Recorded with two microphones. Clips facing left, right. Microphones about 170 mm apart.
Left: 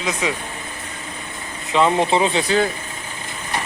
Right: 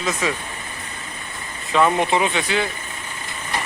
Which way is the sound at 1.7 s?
20° left (ahead or behind).